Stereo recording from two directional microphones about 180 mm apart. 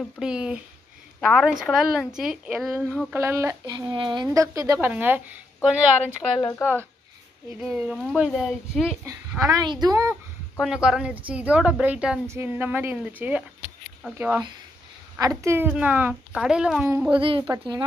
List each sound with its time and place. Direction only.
0.0 s speech: 5° right (ahead or behind)
7.6 s speech: 5° right (ahead or behind)
9.5 s a woman's voice: 25° right (ahead or behind)
10.6 s speech: 5° right (ahead or behind)
16.8 s speech: 15° right (ahead or behind)
17.1 s a woman's voice: 30° right (ahead or behind)